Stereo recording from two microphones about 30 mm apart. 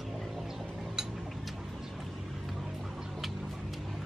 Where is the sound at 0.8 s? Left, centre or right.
Centre.